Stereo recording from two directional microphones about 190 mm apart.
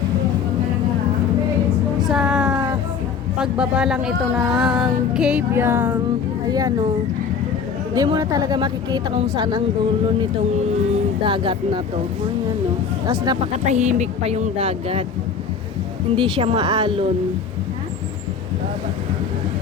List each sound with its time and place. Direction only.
2.0 s a sound: centre (ahead or behind)
3.3 s a woman's voice: 5° right (ahead or behind); by 6.8 s 20° right (ahead or behind)
7.9 s a woman's voice: 20° right (ahead or behind)
11.2 s a woman's voice: 25° right (ahead or behind)
13.1 s a woman's voice: 20° right (ahead or behind)
13.7 s speech: 35° right (ahead or behind)
16.1 s a woman's voice: 25° right (ahead or behind)